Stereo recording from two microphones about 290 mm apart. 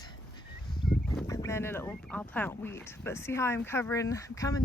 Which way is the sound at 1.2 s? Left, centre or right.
Centre.